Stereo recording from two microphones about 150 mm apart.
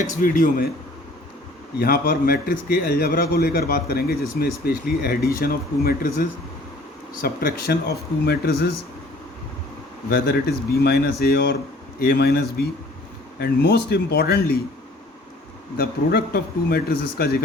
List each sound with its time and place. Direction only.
0.0 s speech: 60° left (ahead or behind)
1.8 s a man's voice: 90° left
7.2 s speech: 80° left
10.1 s speech: 85° left
15.8 s speech: 90° left